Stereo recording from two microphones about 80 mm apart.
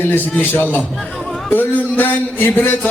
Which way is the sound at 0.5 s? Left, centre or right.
Left.